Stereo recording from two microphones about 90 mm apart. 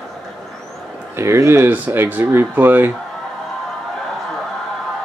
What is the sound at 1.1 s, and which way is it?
Speech, 30° right (ahead or behind).